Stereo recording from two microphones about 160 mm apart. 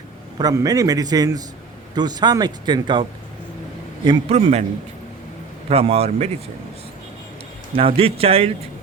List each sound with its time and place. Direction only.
0.3 s speech: 25° right (ahead or behind); by 4.6 s 40° right (ahead or behind)
5.6 s speech: 40° right (ahead or behind)
7.8 s speech: 35° right (ahead or behind)